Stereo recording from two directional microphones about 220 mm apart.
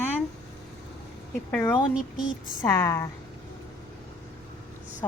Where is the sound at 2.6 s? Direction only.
10° left (ahead or behind).